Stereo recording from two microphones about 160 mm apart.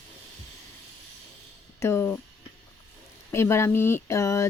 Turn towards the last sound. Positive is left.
turn(degrees=20)  # may be behind; listen again after turning